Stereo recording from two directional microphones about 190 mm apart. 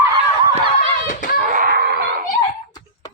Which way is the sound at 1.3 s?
45° right (ahead or behind).